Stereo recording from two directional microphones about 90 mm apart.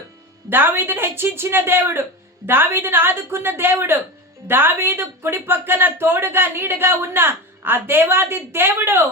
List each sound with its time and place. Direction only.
0.5 s speech: 25° right (ahead or behind)